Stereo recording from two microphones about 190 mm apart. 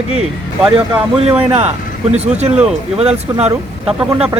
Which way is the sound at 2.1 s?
35° right (ahead or behind).